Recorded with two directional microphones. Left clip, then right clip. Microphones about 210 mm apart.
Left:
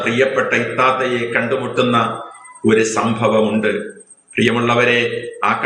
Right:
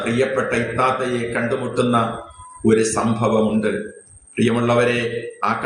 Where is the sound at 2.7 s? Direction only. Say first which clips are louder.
Left 5 dB; 20° right (ahead or behind).